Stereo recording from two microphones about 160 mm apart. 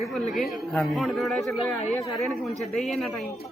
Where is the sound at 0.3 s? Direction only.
Centre (ahead or behind).